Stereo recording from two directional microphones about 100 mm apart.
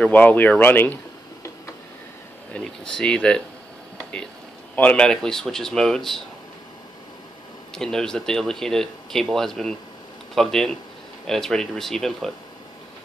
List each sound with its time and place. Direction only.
0.0 s speech: 15° left (ahead or behind)
2.5 s speech: 5° left (ahead or behind)
4.7 s speech: 10° left (ahead or behind)
7.7 s speech: 5° left (ahead or behind)